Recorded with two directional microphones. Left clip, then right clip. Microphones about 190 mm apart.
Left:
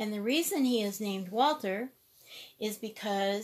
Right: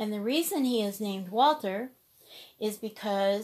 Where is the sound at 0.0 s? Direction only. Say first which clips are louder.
Right 1 dB; 5° right (ahead or behind).